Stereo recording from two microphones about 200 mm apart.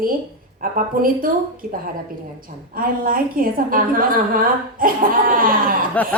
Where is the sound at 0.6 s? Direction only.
45° right (ahead or behind).